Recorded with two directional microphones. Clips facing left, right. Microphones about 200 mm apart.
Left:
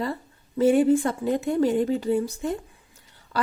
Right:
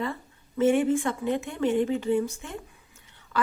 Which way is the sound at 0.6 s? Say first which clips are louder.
Left 4 dB; 35° left (ahead or behind).